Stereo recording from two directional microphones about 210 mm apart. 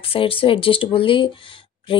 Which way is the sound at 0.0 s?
25° left (ahead or behind).